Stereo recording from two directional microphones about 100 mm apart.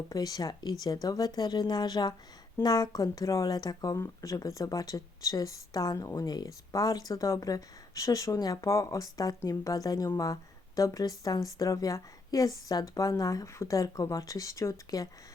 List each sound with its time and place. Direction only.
0.1 s a woman's voice: 40° left (ahead or behind)